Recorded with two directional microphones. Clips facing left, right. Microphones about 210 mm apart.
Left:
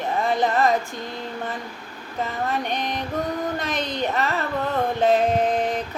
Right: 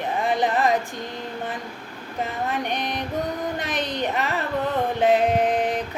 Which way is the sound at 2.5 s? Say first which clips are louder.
Left 1 dB; 15° right (ahead or behind).